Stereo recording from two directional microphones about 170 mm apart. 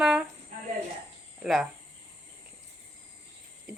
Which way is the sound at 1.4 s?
Centre (ahead or behind).